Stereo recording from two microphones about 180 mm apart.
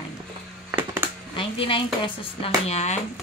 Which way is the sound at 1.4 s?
30° left (ahead or behind).